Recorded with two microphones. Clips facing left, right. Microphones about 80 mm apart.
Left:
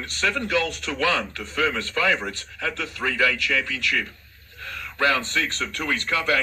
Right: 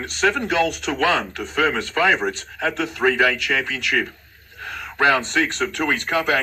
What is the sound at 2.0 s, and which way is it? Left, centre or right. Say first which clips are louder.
Speech: right 4 dB; right.